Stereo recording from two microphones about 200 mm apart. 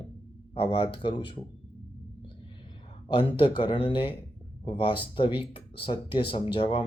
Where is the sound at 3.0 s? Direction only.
25° left (ahead or behind).